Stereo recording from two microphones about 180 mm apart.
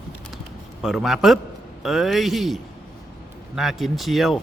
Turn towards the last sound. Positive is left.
turn(degrees=0)  # may be behind; listen again after turning